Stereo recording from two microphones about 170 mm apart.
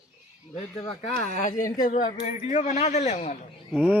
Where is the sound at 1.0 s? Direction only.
40° left (ahead or behind).